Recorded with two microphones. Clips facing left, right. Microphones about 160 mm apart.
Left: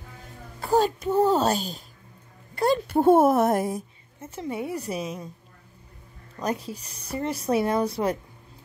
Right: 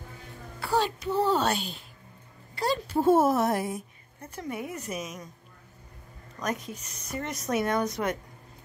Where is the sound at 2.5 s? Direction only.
55° left (ahead or behind).